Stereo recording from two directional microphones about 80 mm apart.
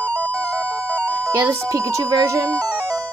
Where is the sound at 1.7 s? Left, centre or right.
Right.